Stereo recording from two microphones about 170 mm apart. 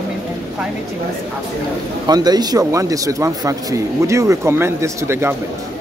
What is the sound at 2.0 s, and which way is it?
Speech, 25° right (ahead or behind).